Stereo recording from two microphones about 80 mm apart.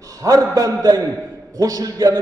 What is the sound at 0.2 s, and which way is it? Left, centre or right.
A man's voice, right.